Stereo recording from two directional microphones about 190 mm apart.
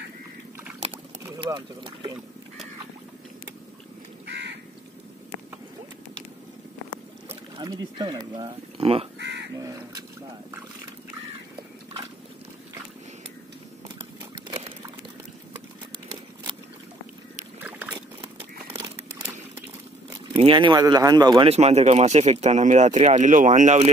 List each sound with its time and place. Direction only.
0.9 s a sound: 10° right (ahead or behind)
1.4 s speech: 25° right (ahead or behind)
4.3 s crow: 65° right (ahead or behind)
7.2 s speech: 25° right (ahead or behind)
9.2 s crow: 60° right (ahead or behind)
9.6 s crow: 20° right (ahead or behind)
17.6 s boat: 10° right (ahead or behind)
20.3 s speech: 25° right (ahead or behind)
21.5 s speech: 35° right (ahead or behind)